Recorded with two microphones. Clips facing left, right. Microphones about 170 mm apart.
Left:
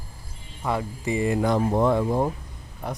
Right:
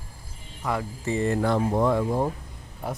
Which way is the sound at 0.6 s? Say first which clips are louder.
Left 2 dB; 25° left (ahead or behind).